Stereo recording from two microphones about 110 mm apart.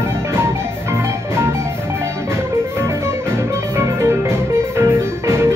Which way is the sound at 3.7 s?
25° right (ahead or behind).